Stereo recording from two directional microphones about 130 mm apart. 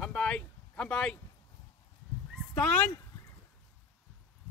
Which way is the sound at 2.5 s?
10° left (ahead or behind).